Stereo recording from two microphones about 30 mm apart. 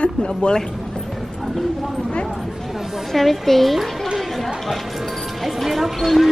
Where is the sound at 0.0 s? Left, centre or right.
Left.